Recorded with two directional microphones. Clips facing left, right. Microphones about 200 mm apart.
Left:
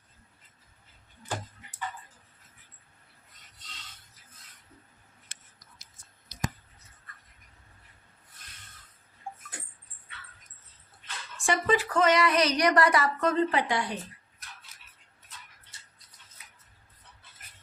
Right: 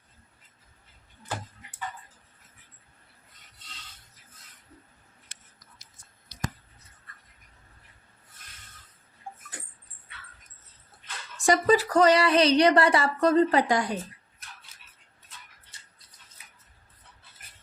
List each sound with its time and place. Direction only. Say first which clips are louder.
11.3 s speech: right 5 dB; 40° right (ahead or behind)